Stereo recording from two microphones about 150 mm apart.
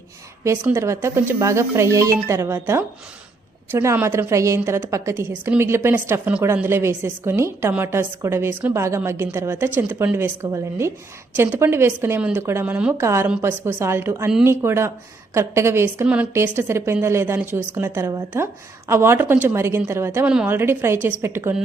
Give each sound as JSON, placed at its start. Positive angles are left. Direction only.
{"t": 0.4, "sound": "a woman's voice", "side_deg": -15}